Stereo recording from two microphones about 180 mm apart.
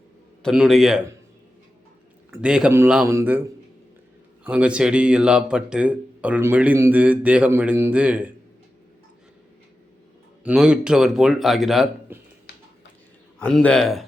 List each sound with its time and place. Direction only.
0.4 s speech: centre (ahead or behind)
2.3 s speech: 5° right (ahead or behind)
10.4 s speech: 5° right (ahead or behind)
12.5 s finger snapping: 65° left (ahead or behind)
13.4 s speech: 5° left (ahead or behind)